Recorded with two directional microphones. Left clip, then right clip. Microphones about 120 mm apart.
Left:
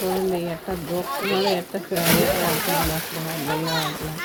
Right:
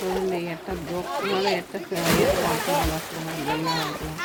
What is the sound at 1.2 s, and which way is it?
Speech, centre (ahead or behind).